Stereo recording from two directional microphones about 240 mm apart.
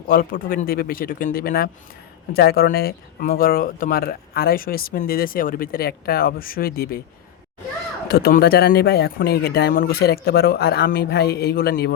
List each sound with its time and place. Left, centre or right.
0.1 s speech: left
8.0 s speech: left